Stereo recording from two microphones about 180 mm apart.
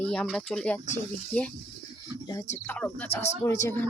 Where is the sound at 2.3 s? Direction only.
15° left (ahead or behind).